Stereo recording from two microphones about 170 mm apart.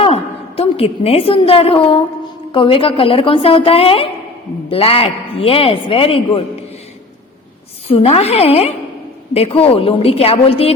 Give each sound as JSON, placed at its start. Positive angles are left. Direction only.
{"t": 0.0, "sound": "a woman's voice", "side_deg": 35}
{"t": 7.9, "sound": "a man's voice", "side_deg": 35}